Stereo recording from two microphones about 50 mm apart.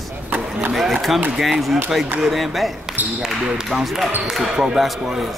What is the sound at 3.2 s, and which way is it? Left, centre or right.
Speech, centre.